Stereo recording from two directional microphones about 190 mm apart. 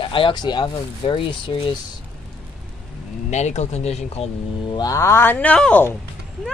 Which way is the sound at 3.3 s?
35° left (ahead or behind).